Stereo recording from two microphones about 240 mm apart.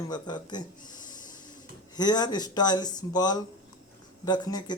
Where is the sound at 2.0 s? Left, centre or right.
Centre.